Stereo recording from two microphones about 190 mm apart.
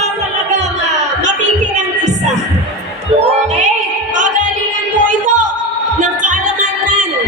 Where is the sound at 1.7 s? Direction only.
40° right (ahead or behind).